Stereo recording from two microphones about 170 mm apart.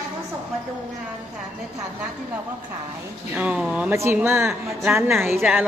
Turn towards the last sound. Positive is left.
turn(degrees=0)  # may be behind; listen again after turning